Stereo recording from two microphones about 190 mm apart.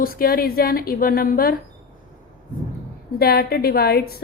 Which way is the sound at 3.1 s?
55° left (ahead or behind).